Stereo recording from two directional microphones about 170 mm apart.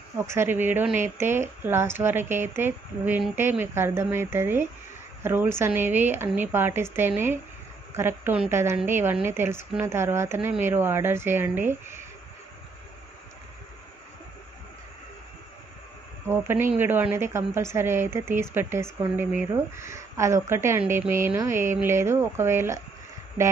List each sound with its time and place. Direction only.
0.2 s a woman's voice: 15° right (ahead or behind)
16.3 s a woman's voice: 15° right (ahead or behind)